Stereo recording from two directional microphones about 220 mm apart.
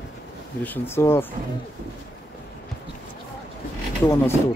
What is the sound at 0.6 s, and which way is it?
Speech, 10° left (ahead or behind).